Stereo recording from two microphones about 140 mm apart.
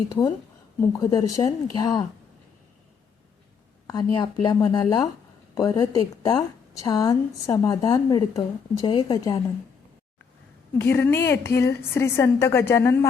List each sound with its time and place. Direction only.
0.1 s a woman's voice: 30° left (ahead or behind)
3.8 s a woman's voice: 30° left (ahead or behind)
10.8 s a woman's voice: 15° left (ahead or behind)